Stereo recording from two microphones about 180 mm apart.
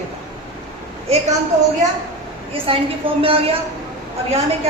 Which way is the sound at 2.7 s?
30° right (ahead or behind).